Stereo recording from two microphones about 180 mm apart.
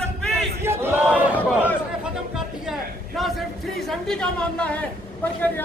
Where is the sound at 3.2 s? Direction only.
Centre (ahead or behind).